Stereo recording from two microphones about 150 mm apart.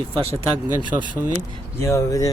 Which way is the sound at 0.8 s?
30° right (ahead or behind).